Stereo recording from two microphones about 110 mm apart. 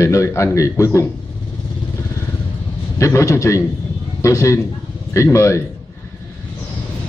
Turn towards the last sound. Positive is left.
turn(degrees=25)  # may be behind; listen again after turning